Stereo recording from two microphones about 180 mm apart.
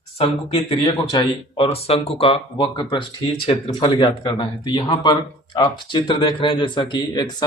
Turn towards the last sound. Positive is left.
turn(degrees=25)  # may be behind; listen again after turning